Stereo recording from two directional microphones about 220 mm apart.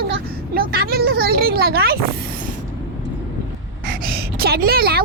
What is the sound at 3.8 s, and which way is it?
Gasp, 45° right (ahead or behind).